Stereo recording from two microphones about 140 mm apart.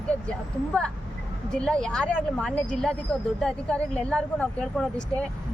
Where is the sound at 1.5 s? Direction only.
5° left (ahead or behind).